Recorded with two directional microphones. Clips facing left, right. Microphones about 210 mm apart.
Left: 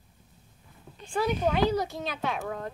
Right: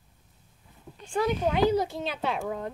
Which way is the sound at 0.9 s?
Centre (ahead or behind).